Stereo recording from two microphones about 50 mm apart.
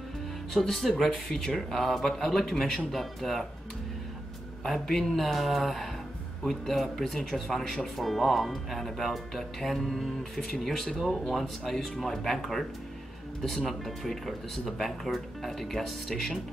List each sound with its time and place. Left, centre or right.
0.5 s speech: centre
4.6 s speech: centre